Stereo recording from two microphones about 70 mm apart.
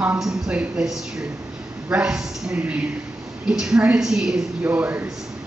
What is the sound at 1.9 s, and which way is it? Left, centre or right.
A woman's voice, centre.